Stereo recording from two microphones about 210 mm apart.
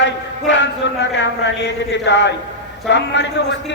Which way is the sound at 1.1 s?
55° left (ahead or behind).